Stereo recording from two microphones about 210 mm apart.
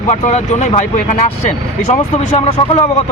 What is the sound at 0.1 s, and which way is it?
Speech, 35° left (ahead or behind).